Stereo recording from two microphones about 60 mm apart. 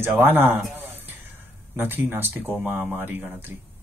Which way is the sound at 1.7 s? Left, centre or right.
Right.